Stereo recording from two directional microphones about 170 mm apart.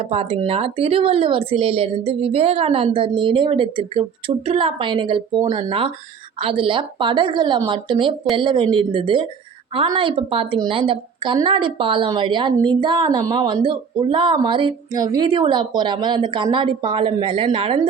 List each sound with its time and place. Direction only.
0.0 s a woman's voice: 35° right (ahead or behind)